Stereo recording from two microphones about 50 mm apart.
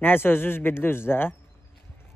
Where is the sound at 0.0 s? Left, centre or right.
Left.